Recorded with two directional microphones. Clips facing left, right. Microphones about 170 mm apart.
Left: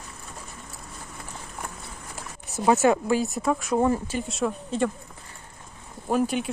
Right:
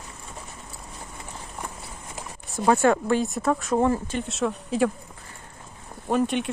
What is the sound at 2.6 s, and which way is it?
Speech, 20° left (ahead or behind).